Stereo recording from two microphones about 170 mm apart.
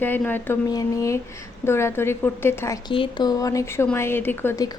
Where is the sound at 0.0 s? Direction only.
10° left (ahead or behind).